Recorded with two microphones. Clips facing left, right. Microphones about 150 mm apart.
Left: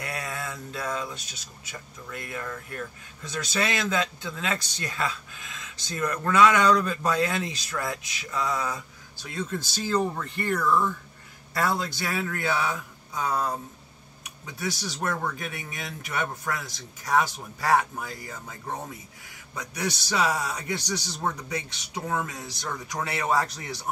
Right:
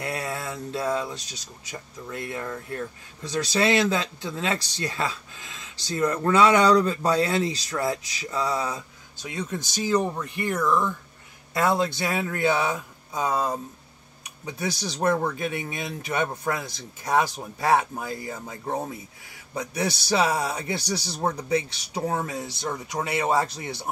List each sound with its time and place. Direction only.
0.0 s a man's voice: 30° right (ahead or behind)
15.0 s a man's voice: 25° right (ahead or behind)